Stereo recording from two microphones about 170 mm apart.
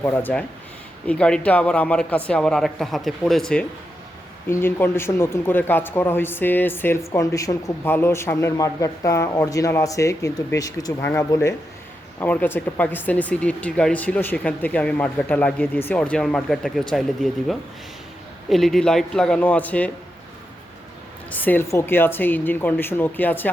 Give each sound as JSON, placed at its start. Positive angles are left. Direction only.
{"t": 0.0, "sound": "speech", "side_deg": 10}
{"t": 18.4, "sound": "speech", "side_deg": 0}
{"t": 21.2, "sound": "speech", "side_deg": 10}